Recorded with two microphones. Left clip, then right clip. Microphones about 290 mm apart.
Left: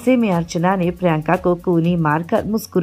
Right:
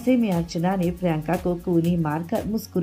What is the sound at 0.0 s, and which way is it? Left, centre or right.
A woman's voice, left.